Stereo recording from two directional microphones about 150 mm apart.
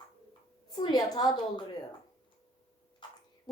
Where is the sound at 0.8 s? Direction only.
25° left (ahead or behind).